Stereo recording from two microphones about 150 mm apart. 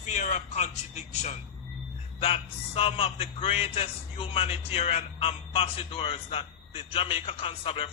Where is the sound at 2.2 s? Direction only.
40° left (ahead or behind).